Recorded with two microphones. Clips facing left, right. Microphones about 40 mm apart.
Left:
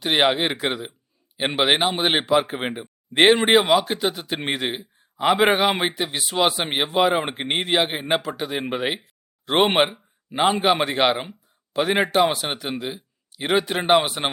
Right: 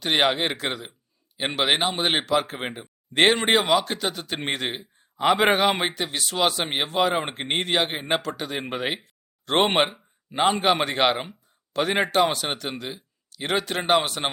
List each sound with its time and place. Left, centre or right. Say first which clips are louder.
0.0 s a man's voice: left 2 dB; centre